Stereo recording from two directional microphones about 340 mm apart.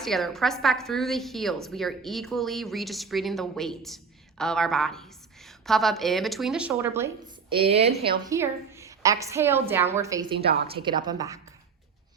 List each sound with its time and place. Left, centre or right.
0.0 s a woman's voice: centre